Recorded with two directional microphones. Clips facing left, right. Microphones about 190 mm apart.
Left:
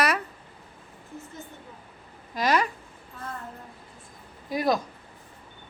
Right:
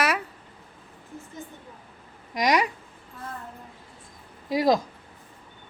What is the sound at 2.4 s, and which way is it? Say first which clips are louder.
Speech: right 1 dB; 15° right (ahead or behind).